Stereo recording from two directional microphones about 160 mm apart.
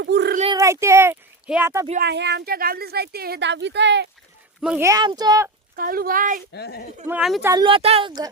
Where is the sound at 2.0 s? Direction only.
90° right.